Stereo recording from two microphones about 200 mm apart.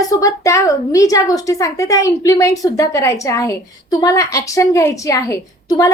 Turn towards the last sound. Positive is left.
turn(degrees=15)  # may be behind; listen again after turning